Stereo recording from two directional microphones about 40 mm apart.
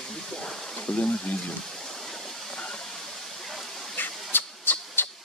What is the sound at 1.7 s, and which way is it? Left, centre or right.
Waterfall, centre.